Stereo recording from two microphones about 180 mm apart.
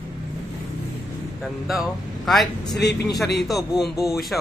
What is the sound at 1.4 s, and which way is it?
A man's voice, centre (ahead or behind).